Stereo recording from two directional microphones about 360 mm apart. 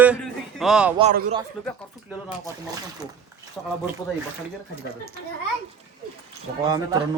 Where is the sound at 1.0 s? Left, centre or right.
Centre.